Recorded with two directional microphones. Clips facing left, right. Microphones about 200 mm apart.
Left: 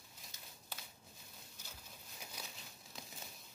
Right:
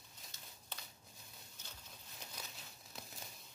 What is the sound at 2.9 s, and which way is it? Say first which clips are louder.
Crumpling: even; centre (ahead or behind).